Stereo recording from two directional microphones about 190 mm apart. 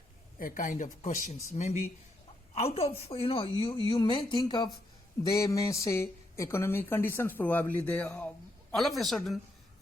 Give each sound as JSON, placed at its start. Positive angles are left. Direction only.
{"t": 0.3, "sound": "a woman's voice", "side_deg": 45}